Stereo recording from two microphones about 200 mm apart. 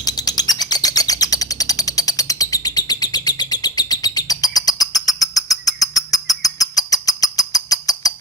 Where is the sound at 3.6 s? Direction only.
20° left (ahead or behind).